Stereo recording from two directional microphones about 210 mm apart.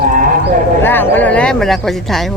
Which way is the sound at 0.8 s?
10° left (ahead or behind).